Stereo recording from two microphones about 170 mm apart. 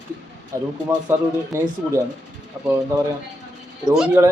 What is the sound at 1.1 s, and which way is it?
Speech, 15° right (ahead or behind).